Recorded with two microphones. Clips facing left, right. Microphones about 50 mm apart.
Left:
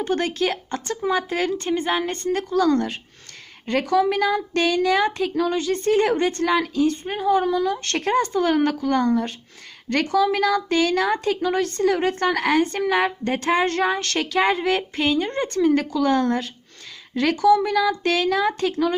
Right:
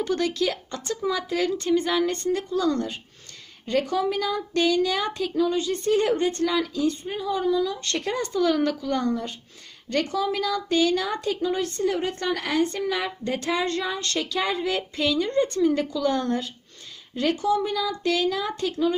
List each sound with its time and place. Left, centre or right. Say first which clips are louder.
0.0 s speech: left 2 dB; left
2.3 s a woman's voice: left 9 dB; left
5.4 s speech: even; left
5.7 s a woman's voice: left 5 dB; left
13.7 s a woman's voice: left 5 dB; left
17.2 s speech: left 6 dB; left